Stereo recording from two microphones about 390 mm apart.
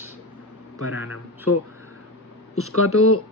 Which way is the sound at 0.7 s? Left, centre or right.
Left.